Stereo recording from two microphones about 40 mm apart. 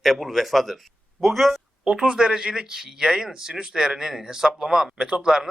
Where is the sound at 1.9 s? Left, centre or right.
Centre.